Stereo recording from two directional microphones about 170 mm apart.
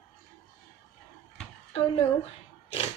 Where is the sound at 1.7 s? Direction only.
35° left (ahead or behind).